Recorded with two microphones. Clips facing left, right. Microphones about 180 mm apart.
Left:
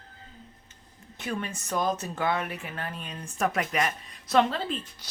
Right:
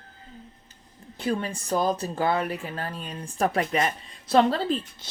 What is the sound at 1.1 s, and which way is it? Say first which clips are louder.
A woman's voice: right 5 dB; 30° right (ahead or behind).